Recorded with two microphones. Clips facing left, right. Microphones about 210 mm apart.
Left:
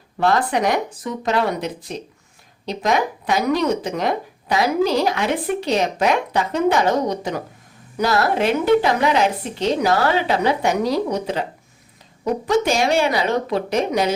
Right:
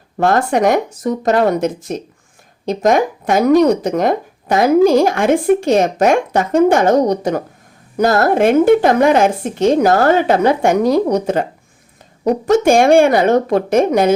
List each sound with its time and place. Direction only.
0.2 s speech: 45° right (ahead or behind)
12.5 s speech: 50° right (ahead or behind)